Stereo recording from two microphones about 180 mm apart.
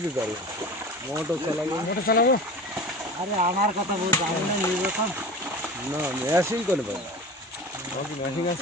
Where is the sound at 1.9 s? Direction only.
60° left (ahead or behind).